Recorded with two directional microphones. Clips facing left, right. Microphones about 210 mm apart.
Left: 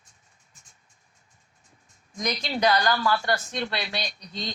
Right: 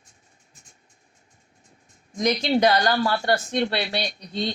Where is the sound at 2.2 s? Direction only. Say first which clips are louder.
Right 7 dB; 30° right (ahead or behind).